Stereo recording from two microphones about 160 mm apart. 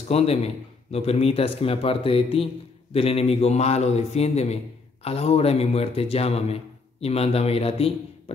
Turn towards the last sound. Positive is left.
turn(degrees=40)  # may be behind; listen again after turning